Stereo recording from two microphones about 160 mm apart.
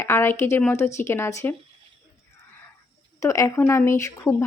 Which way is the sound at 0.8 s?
45° left (ahead or behind).